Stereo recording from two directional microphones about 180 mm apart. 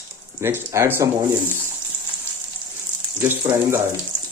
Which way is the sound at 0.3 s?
15° right (ahead or behind).